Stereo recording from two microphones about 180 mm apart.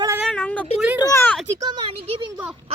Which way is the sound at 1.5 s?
20° right (ahead or behind).